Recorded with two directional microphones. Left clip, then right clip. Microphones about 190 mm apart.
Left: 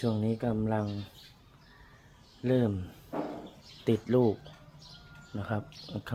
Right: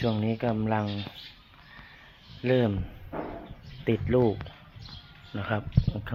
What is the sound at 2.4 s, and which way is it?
Speech, 20° right (ahead or behind).